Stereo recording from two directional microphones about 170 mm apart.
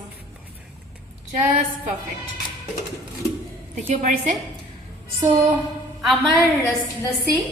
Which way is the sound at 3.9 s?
45° right (ahead or behind).